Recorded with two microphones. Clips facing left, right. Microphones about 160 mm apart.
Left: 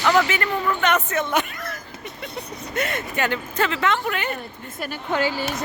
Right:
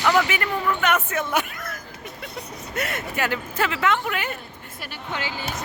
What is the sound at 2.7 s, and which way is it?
Speech, 5° right (ahead or behind).